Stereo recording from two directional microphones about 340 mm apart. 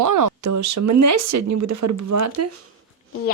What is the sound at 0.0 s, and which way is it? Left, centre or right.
Speech, right.